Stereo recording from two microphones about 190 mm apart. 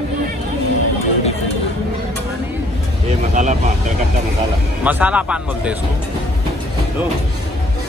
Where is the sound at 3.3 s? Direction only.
40° right (ahead or behind).